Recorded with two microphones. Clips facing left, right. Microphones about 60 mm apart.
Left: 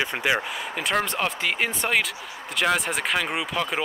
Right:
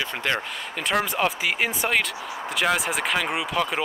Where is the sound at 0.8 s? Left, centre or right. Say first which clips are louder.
Right 2 dB; centre.